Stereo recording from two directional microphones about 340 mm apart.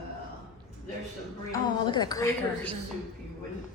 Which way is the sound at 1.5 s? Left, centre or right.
Centre.